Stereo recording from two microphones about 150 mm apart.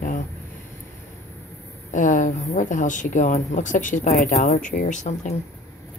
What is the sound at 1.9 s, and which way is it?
Speech, 60° left (ahead or behind).